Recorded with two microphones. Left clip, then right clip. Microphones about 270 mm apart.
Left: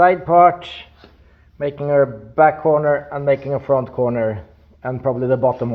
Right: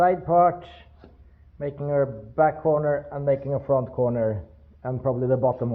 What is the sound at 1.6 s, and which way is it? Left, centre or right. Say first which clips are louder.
A man's voice: left 8 dB; left.